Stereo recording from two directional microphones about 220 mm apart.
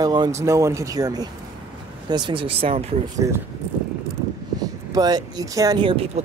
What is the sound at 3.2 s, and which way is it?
Speech, 15° right (ahead or behind).